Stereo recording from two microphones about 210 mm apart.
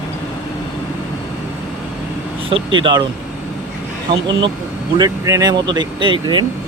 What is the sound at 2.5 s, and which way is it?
Speech, 25° right (ahead or behind).